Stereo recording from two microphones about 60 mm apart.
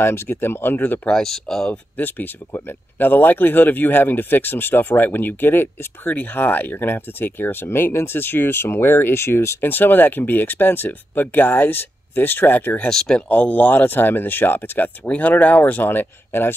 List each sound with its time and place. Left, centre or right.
0.0 s speech: left
1.0 s speech: centre
1.7 s speech: left
9.7 s speech: left
12.9 s speech: centre
13.3 s speech: left